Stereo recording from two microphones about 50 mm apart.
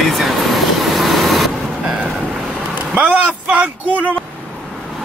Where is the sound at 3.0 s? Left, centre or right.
Right.